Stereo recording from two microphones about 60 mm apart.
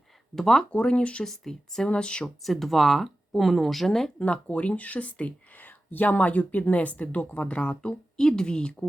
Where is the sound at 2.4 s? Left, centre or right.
Centre.